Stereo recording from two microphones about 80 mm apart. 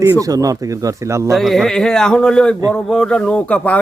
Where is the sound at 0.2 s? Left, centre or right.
Right.